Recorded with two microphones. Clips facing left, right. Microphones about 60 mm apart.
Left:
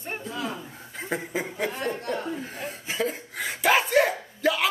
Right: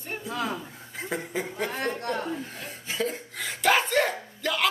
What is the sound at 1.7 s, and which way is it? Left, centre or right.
Speech, right.